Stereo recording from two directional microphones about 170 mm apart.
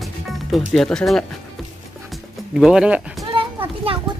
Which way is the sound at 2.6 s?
5° right (ahead or behind).